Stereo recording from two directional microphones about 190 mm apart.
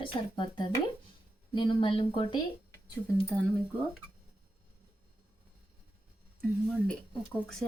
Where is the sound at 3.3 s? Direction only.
10° left (ahead or behind).